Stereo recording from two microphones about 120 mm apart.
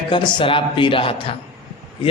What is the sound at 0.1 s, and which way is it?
A man's voice, 40° left (ahead or behind).